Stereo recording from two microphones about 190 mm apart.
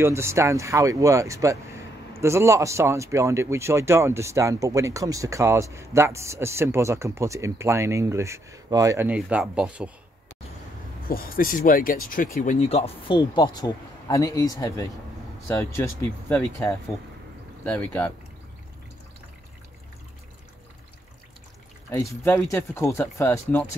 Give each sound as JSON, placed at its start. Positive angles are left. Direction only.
{"t": 0.0, "sound": "speech", "side_deg": -15}
{"t": 11.1, "sound": "speech", "side_deg": 50}
{"t": 21.9, "sound": "speech", "side_deg": 15}